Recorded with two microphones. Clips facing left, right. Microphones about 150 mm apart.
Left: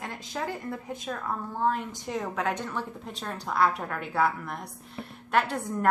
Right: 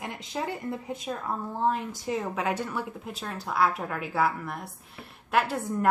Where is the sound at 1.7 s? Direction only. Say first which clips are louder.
Right 2 dB; 5° right (ahead or behind).